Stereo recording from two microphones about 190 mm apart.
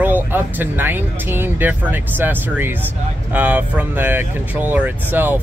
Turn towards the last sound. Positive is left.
turn(degrees=-10)  # may be behind; listen again after turning